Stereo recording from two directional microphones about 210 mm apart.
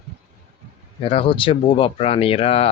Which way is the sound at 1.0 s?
25° left (ahead or behind).